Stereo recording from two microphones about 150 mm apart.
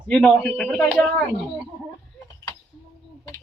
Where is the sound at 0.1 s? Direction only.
5° left (ahead or behind).